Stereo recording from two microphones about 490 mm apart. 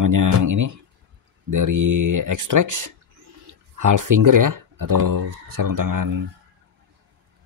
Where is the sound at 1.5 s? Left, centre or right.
Right.